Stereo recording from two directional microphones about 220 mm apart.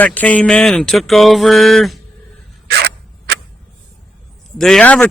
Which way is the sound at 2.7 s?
45° right (ahead or behind).